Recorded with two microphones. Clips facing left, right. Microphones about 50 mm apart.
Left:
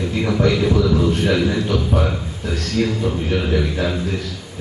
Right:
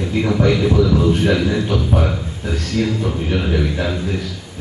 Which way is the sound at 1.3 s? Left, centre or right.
Centre.